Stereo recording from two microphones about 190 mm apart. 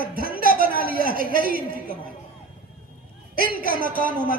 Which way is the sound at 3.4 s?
50° right (ahead or behind).